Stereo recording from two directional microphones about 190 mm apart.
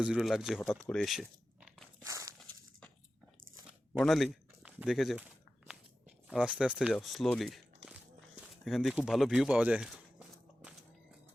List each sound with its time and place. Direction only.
0.0 s speech: 5° right (ahead or behind)
0.7 s biting: centre (ahead or behind)
2.0 s walk: 15° right (ahead or behind)
2.4 s glass: 5° left (ahead or behind)
3.9 s speech: centre (ahead or behind)
5.6 s a sound: 5° right (ahead or behind)
6.9 s speech: centre (ahead or behind)
8.6 s speech: centre (ahead or behind)